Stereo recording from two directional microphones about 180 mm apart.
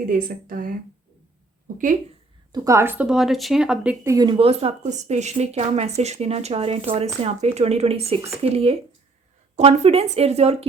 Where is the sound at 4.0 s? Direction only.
20° right (ahead or behind).